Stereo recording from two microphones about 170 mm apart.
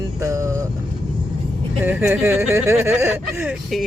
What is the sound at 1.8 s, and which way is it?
Speech, 10° right (ahead or behind).